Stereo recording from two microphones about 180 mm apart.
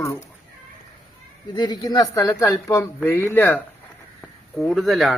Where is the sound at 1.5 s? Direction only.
20° left (ahead or behind).